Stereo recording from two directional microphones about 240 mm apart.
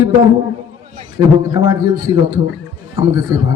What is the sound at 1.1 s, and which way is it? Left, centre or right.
A man's voice, centre.